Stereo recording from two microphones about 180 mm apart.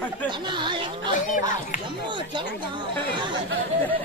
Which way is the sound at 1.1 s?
45° left (ahead or behind).